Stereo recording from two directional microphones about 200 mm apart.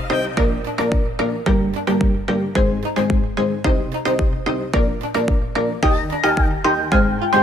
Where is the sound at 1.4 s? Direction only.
Centre (ahead or behind).